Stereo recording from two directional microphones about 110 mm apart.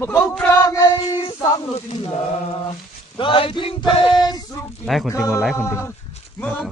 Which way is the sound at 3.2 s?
55° left (ahead or behind).